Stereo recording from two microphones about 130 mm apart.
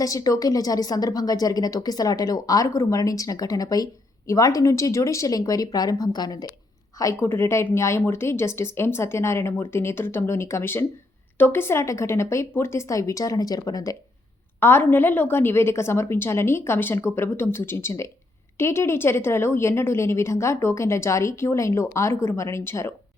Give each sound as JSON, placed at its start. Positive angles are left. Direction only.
{"t": 0.0, "sound": "speech", "side_deg": 25}
{"t": 14.6, "sound": "speech", "side_deg": 15}